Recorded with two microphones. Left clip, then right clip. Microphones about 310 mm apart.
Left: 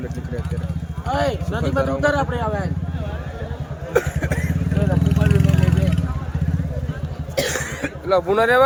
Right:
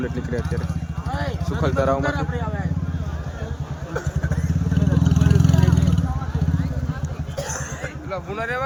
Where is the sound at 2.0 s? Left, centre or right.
Centre.